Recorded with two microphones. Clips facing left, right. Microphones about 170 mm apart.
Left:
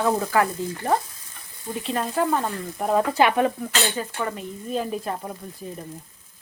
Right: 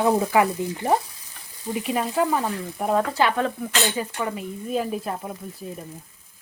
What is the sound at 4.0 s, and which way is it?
Speech, 5° right (ahead or behind).